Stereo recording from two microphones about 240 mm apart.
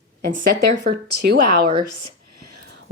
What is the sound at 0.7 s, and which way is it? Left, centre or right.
Speech, right.